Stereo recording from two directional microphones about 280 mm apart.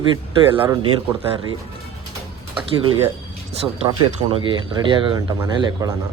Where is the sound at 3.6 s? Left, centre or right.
Centre.